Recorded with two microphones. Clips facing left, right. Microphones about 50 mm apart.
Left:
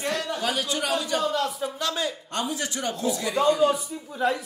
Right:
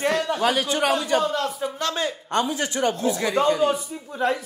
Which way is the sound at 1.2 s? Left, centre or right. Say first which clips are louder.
Right 1 dB; centre.